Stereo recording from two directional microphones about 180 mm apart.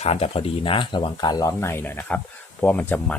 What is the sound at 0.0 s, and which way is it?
Speech, 35° left (ahead or behind).